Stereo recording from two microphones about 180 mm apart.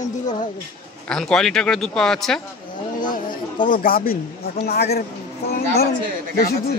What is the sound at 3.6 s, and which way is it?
Speech, 50° left (ahead or behind).